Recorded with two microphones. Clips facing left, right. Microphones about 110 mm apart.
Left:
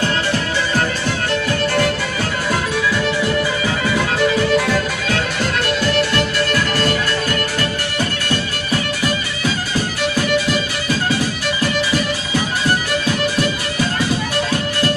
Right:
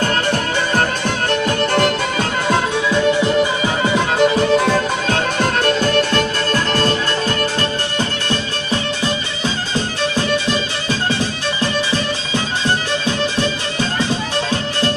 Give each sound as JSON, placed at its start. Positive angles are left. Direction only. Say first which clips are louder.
{"t": 0.0, "sound": "music", "louder": "right 1 dB", "side_deg": -50}
{"t": 2.5, "sound": "music", "louder": "right 3 dB", "side_deg": -20}
{"t": 5.0, "sound": "music", "louder": "right 3 dB", "side_deg": -45}
{"t": 6.1, "sound": "music", "louder": "even", "side_deg": -25}
{"t": 9.0, "sound": "music", "louder": "even", "side_deg": -25}